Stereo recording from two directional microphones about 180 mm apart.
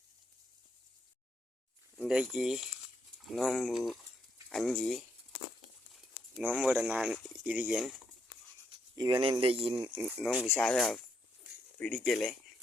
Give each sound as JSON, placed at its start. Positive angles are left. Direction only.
{"t": 2.0, "sound": "speech", "side_deg": -5}
{"t": 6.4, "sound": "speech", "side_deg": -5}
{"t": 9.0, "sound": "speech", "side_deg": -25}
{"t": 10.0, "sound": "speech", "side_deg": 0}
{"t": 10.3, "sound": "speech", "side_deg": 10}